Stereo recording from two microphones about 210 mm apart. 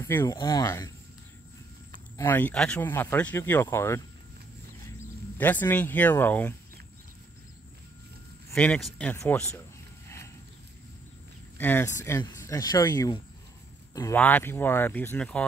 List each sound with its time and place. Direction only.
0.0 s speech: 15° left (ahead or behind)
2.1 s speech: 10° left (ahead or behind)
5.4 s speech: 10° left (ahead or behind)
8.5 s speech: 5° left (ahead or behind)
10.0 s wild animals: 15° left (ahead or behind)
11.5 s speech: 10° left (ahead or behind)